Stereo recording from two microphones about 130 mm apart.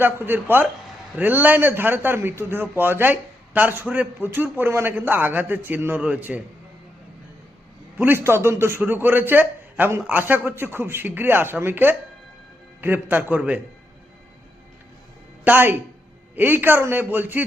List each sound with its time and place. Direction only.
0.0 s a man's voice: 15° right (ahead or behind)
7.9 s a man's voice: 15° right (ahead or behind)
15.4 s a man's voice: 15° right (ahead or behind)